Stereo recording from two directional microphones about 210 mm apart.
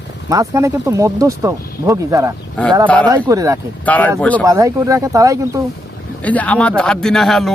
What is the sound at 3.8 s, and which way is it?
Speech, 5° left (ahead or behind).